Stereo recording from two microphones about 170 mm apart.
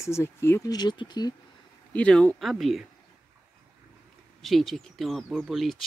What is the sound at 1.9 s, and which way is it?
Speech, 5° left (ahead or behind).